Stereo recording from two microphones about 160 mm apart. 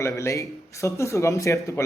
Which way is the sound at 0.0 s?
20° left (ahead or behind).